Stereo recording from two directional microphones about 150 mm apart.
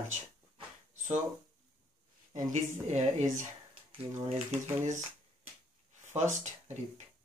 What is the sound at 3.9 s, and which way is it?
Speech, 40° right (ahead or behind).